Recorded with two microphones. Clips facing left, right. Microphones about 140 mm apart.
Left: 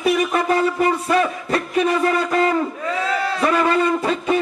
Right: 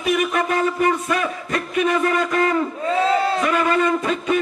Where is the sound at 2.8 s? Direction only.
30° right (ahead or behind).